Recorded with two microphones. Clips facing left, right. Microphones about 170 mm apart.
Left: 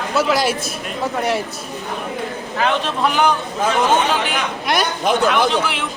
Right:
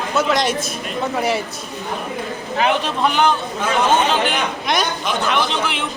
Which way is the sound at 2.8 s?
Centre (ahead or behind).